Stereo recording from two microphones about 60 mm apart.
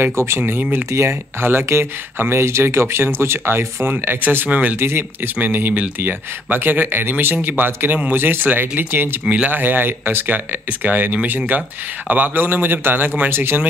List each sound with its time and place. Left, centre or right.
0.0 s speech: right
4.7 s speech: right
5.4 s speech: right
9.3 s speech: right
9.6 s speech: right